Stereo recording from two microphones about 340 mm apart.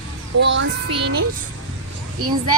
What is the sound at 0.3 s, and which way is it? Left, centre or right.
Child singing, right.